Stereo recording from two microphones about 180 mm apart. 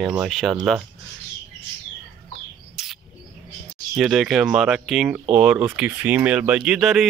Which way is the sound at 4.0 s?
Centre (ahead or behind).